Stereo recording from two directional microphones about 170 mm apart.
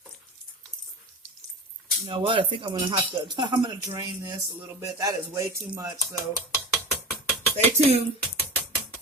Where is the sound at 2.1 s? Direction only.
30° right (ahead or behind).